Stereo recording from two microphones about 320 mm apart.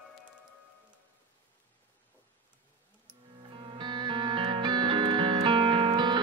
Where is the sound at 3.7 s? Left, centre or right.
Centre.